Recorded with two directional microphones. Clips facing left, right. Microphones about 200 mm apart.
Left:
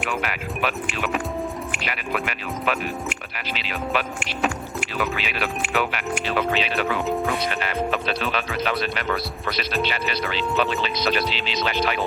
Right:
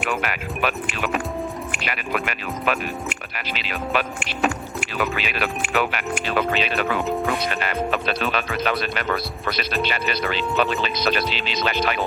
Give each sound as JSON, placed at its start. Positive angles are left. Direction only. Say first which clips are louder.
{"t": 0.0, "sound": "speech", "louder": "right 1 dB", "side_deg": -50}